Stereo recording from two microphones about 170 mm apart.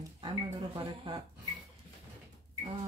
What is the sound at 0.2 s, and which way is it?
Speech, 25° right (ahead or behind).